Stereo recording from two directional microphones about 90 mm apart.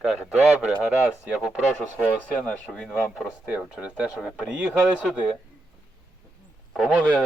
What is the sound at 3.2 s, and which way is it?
Speech, 10° right (ahead or behind).